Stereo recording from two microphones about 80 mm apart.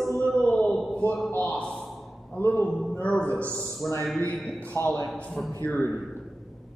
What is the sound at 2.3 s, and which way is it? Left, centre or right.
Speech, left.